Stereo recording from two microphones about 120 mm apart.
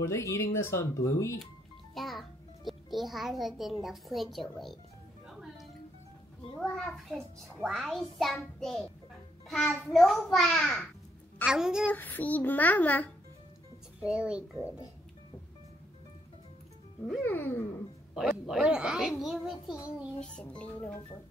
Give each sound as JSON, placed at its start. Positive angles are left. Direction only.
{"t": 0.0, "sound": "speech", "side_deg": 25}
{"t": 2.0, "sound": "a child's voice", "side_deg": 0}
{"t": 5.3, "sound": "music", "side_deg": -5}
{"t": 6.6, "sound": "a child's voice", "side_deg": 5}
{"t": 11.9, "sound": "a child's voice", "side_deg": 15}
{"t": 14.0, "sound": "a woman's voice", "side_deg": -10}
{"t": 17.2, "sound": "a child's voice", "side_deg": 15}
{"t": 18.1, "sound": "a child's voice", "side_deg": 0}
{"t": 20.2, "sound": "a child's voice", "side_deg": 10}